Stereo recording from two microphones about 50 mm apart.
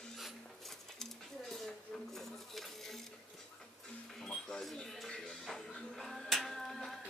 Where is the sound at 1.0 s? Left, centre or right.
Centre.